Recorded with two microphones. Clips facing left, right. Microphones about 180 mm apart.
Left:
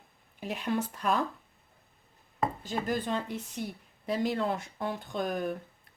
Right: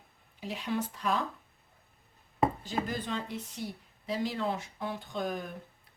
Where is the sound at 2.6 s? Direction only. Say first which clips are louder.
Left 3 dB; 50° left (ahead or behind).